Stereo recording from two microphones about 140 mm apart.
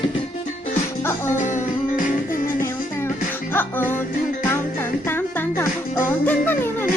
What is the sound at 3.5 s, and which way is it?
Music, 15° left (ahead or behind).